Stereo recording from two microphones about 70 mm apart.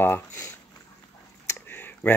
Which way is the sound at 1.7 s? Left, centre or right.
Left.